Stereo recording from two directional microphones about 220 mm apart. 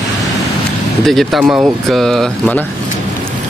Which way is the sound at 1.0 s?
Centre (ahead or behind).